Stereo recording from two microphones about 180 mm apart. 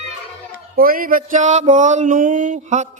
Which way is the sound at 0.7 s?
55° right (ahead or behind).